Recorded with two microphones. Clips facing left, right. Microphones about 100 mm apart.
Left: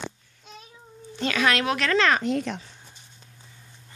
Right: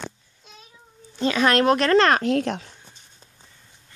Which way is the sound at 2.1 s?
75° right (ahead or behind).